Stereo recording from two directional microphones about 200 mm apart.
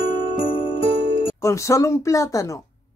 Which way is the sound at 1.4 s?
15° left (ahead or behind).